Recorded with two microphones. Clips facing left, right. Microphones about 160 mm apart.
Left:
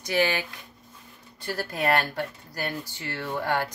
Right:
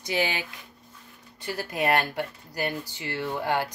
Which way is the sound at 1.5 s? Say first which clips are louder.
Even; 15° right (ahead or behind).